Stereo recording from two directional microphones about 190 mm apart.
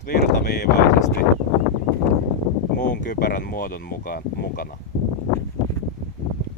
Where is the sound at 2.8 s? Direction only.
40° left (ahead or behind).